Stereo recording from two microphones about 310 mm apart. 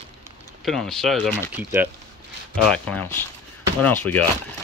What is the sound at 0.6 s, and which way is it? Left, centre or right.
Speech, centre.